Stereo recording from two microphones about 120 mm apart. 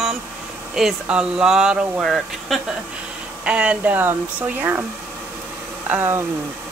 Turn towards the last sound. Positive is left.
turn(degrees=-20)  # may be behind; listen again after turning